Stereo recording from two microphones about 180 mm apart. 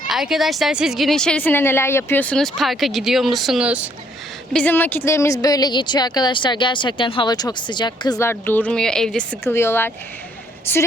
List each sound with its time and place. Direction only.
0.1 s speech: centre (ahead or behind)
4.5 s a woman's voice: 10° left (ahead or behind)